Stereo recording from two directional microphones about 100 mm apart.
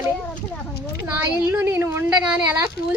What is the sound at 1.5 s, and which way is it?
A woman's voice, 20° right (ahead or behind).